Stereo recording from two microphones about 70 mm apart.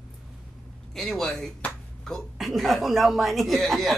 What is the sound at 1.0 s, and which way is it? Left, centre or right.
A man's voice, centre.